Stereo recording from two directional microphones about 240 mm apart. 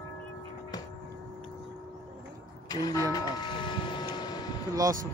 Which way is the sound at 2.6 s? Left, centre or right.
Centre.